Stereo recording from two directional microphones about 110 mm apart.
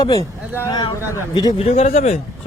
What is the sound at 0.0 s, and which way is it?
Speech, 35° left (ahead or behind).